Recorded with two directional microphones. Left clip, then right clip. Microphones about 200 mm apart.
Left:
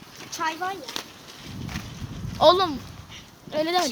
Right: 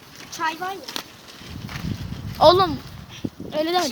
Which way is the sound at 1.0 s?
50° right (ahead or behind).